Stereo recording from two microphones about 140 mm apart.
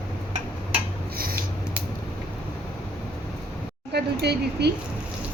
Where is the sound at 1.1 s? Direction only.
90° right.